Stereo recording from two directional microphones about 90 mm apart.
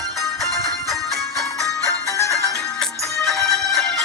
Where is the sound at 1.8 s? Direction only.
35° left (ahead or behind).